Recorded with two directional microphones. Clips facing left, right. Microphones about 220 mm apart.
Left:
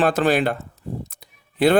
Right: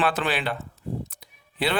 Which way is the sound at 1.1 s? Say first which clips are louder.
Left 4 dB; 45° left (ahead or behind).